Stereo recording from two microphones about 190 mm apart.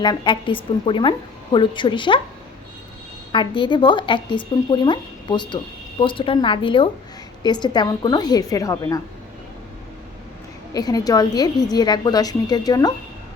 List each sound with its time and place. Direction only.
0.0 s speech: 25° left (ahead or behind)
3.3 s speech: 25° left (ahead or behind)
10.8 s speech: 20° left (ahead or behind)